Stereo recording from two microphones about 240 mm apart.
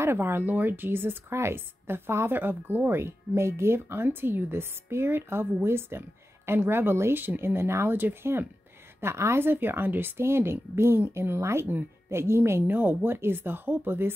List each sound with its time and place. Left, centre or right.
0.0 s speech: centre